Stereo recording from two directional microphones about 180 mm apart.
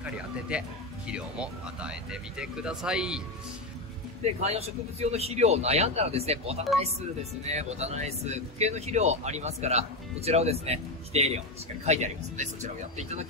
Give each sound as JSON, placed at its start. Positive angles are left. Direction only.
{"t": 0.0, "sound": "speech", "side_deg": -5}
{"t": 4.2, "sound": "speech", "side_deg": -35}